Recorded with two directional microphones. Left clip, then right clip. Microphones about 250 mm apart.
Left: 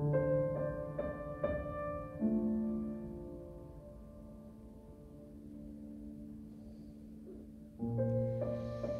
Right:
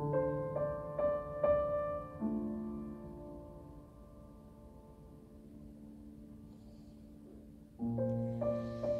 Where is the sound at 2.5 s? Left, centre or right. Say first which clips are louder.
Left 5 dB; right.